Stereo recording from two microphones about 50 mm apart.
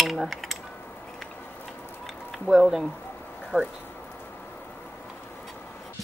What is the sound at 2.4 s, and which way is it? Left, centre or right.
Speech, centre.